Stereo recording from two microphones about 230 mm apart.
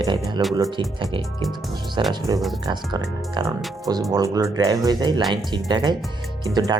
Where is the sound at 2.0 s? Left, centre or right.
Centre.